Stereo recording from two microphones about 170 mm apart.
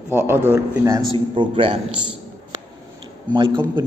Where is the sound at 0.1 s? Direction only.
10° right (ahead or behind).